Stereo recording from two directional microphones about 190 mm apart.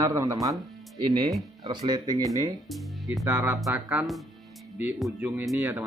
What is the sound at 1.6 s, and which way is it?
Speech, 20° right (ahead or behind).